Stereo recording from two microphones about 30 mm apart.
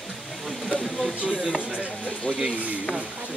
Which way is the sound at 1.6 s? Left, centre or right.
Right.